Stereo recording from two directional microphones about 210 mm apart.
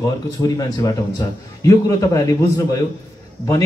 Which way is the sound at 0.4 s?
15° left (ahead or behind).